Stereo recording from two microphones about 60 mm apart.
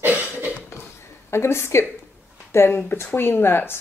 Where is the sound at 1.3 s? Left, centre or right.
Left.